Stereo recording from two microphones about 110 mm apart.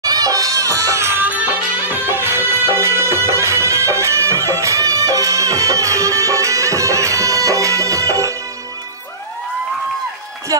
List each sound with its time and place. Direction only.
0.0 s music: 35° right (ahead or behind)